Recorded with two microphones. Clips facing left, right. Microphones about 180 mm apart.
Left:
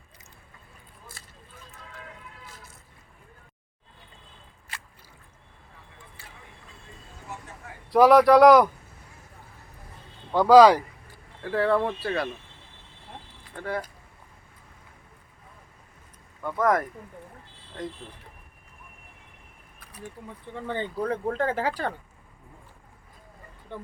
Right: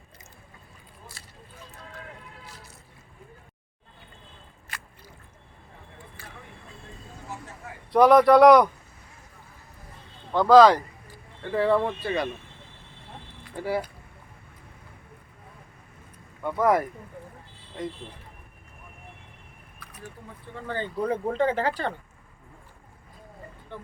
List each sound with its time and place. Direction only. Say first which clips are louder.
7.9 s speech: even; centre (ahead or behind)
10.3 s speech: left 1 dB; 10° left (ahead or behind)
11.4 s speech: right 1 dB; centre (ahead or behind)
13.6 s speech: right 3 dB; 10° right (ahead or behind)
16.4 s speech: right 1 dB; 5° right (ahead or behind)
20.7 s speech: left 1 dB; 20° left (ahead or behind)
20.9 s speech: right 3 dB; 5° right (ahead or behind)